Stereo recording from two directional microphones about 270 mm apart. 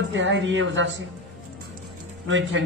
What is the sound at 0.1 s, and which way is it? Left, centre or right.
Speech, right.